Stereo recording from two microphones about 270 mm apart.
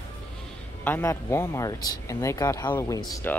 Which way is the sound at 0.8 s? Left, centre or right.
Centre.